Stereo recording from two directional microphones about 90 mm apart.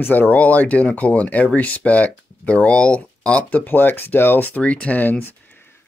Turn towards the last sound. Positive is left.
turn(degrees=20)  # may be behind; listen again after turning